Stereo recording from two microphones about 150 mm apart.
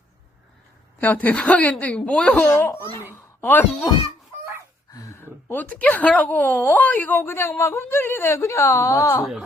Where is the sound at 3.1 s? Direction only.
15° left (ahead or behind).